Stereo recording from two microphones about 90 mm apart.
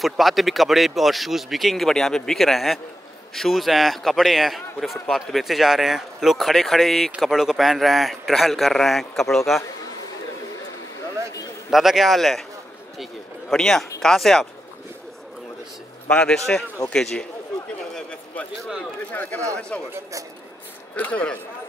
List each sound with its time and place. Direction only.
0.0 s speech: centre (ahead or behind)
11.7 s speech: 5° right (ahead or behind)
16.1 s a man's voice: 10° left (ahead or behind)
19.7 s a man's voice: 15° left (ahead or behind)
20.9 s a man's voice: 15° left (ahead or behind)